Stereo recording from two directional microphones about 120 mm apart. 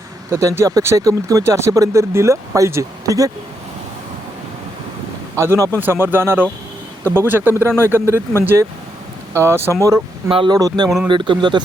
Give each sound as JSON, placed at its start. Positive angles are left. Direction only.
{"t": 0.3, "sound": "speech", "side_deg": -25}
{"t": 5.4, "sound": "speech", "side_deg": -25}
{"t": 10.2, "sound": "speech", "side_deg": -45}
{"t": 10.8, "sound": "speech", "side_deg": -5}
{"t": 11.1, "sound": "speech", "side_deg": -40}